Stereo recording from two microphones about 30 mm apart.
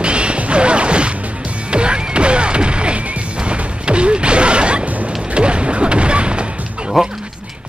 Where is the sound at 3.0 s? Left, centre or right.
Right.